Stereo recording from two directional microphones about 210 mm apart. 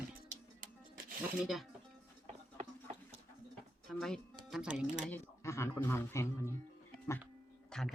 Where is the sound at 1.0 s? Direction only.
45° right (ahead or behind).